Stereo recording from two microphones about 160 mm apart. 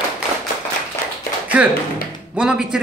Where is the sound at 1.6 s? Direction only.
5° right (ahead or behind).